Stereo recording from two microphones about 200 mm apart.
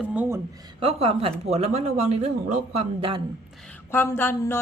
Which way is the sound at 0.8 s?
30° right (ahead or behind).